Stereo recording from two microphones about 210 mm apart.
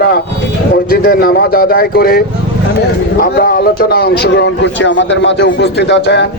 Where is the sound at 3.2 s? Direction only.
45° left (ahead or behind).